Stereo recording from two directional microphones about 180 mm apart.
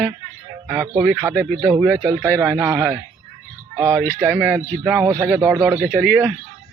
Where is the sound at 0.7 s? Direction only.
10° right (ahead or behind).